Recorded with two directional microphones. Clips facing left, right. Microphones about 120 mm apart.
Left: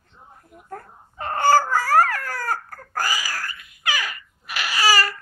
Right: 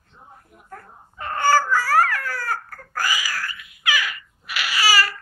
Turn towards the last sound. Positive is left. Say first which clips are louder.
# left 1 dB
turn(degrees=40)  # may be behind; listen again after turning